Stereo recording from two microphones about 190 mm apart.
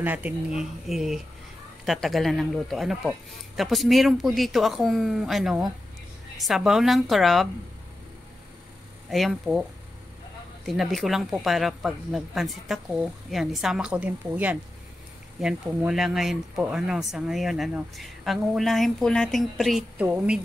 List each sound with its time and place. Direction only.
0.0 s speech: 10° right (ahead or behind)
9.1 s speech: centre (ahead or behind)